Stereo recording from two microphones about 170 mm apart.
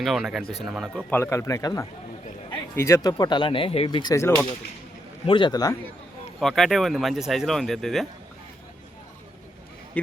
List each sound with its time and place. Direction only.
0.0 s speech: centre (ahead or behind)
1.1 s speech: 15° left (ahead or behind)
6.4 s speech: centre (ahead or behind)